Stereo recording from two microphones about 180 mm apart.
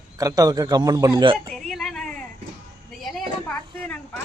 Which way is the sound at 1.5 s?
Centre (ahead or behind).